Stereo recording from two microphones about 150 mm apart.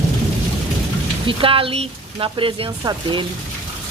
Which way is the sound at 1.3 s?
35° right (ahead or behind).